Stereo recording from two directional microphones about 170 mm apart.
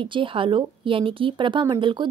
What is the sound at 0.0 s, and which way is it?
Speech, 30° right (ahead or behind).